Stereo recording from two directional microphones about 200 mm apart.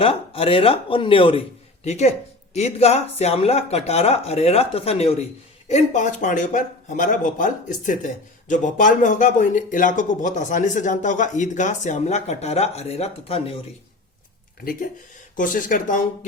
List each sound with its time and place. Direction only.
0.0 s a man's voice: 30° left (ahead or behind)
14.6 s speech: 45° left (ahead or behind)